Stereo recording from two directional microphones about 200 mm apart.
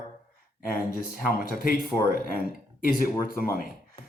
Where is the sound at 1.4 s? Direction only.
45° left (ahead or behind).